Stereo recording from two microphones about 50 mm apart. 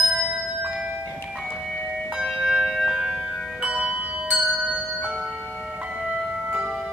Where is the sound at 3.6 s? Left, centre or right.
Centre.